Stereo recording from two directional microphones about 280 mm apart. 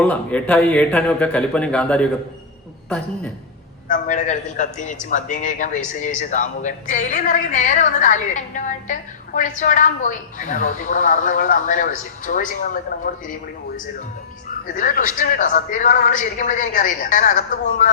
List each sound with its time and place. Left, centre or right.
0.0 s a man's voice: centre
3.8 s speech: left
14.8 s speech: left